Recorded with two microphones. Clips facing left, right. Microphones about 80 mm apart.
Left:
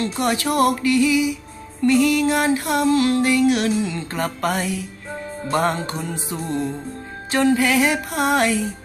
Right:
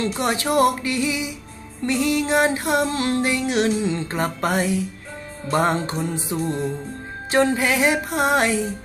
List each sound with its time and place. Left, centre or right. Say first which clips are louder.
0.0 s music: left 1 dB; right
7.3 s music: left 2 dB; right